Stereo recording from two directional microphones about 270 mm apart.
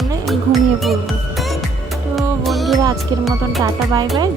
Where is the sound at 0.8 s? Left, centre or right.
Centre.